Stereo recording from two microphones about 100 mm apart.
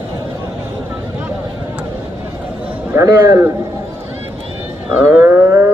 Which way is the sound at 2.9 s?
30° right (ahead or behind).